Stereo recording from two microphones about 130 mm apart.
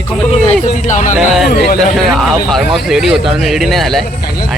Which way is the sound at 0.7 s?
70° left (ahead or behind).